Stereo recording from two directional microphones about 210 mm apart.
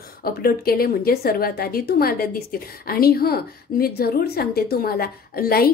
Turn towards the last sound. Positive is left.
turn(degrees=45)  # may be behind; listen again after turning